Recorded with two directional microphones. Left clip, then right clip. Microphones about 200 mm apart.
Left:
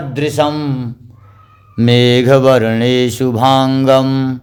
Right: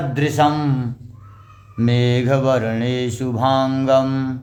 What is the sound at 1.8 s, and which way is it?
Mantra, 50° left (ahead or behind).